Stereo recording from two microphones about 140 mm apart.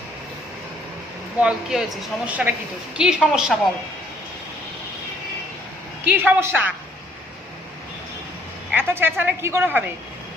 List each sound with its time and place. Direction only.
1.4 s a woman's voice: 5° right (ahead or behind)
6.1 s a woman's voice: 10° right (ahead or behind)
8.7 s a woman's voice: 15° right (ahead or behind)